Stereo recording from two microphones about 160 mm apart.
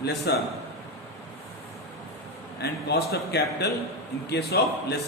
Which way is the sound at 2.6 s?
85° left.